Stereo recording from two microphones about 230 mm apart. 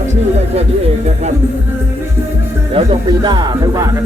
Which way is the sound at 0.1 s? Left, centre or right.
Right.